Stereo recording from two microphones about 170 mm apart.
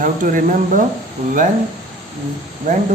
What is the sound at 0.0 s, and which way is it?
Speech, 55° right (ahead or behind).